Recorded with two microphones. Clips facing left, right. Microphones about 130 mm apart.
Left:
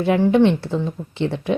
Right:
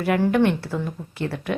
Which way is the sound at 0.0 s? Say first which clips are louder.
Left 4 dB; 25° left (ahead or behind).